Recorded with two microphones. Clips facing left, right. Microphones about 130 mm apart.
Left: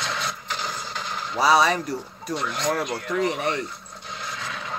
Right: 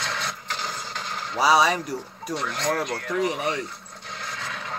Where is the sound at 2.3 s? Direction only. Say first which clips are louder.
Left 1 dB; 15° left (ahead or behind).